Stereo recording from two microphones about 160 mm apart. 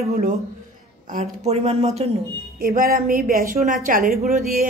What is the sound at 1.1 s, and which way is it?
Speech, 45° right (ahead or behind).